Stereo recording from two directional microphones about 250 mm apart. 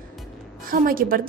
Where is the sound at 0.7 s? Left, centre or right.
Right.